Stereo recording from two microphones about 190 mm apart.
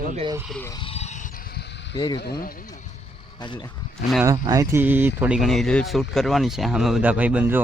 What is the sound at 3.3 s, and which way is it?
Speech, 25° left (ahead or behind).